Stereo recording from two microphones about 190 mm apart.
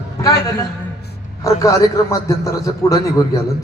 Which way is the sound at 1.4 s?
15° left (ahead or behind).